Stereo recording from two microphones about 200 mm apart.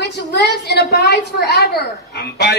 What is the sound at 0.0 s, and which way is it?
A man's voice, 55° left (ahead or behind).